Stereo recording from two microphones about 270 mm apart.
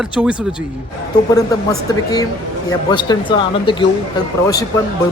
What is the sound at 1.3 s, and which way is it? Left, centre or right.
A man's voice, centre.